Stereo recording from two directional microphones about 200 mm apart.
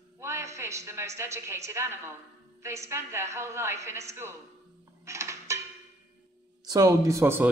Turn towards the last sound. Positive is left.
turn(degrees=-15)  # may be behind; listen again after turning